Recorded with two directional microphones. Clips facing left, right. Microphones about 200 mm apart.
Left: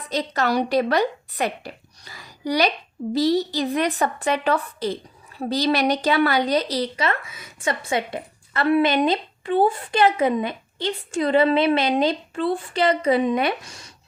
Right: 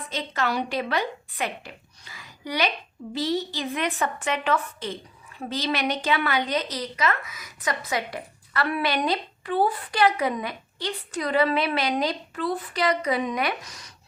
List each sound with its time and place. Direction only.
0.1 s a woman's voice: 40° left (ahead or behind)